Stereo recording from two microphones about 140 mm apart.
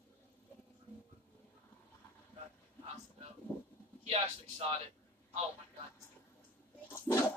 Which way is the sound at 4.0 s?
45° right (ahead or behind).